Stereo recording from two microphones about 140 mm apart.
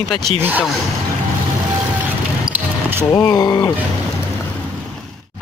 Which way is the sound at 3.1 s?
30° left (ahead or behind).